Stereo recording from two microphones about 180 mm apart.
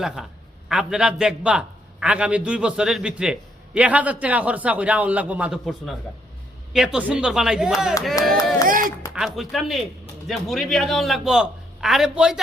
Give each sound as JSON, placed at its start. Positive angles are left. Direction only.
{"t": 0.2, "sound": "a man's voice", "side_deg": 0}
{"t": 8.6, "sound": "speech", "side_deg": -50}
{"t": 9.1, "sound": "a man's voice", "side_deg": 0}